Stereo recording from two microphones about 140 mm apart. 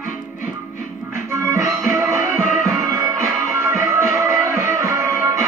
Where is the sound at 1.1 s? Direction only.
20° right (ahead or behind).